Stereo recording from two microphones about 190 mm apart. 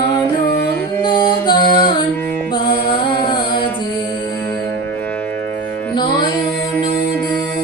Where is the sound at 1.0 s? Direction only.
25° left (ahead or behind).